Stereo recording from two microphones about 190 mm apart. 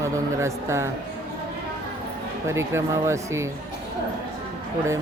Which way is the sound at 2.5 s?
15° right (ahead or behind).